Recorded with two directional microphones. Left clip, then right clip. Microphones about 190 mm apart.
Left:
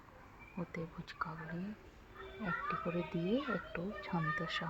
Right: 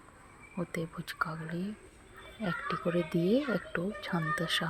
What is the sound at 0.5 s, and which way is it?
A child's voice, 20° right (ahead or behind).